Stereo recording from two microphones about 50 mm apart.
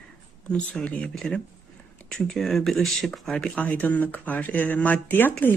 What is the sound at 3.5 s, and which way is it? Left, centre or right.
Speech, left.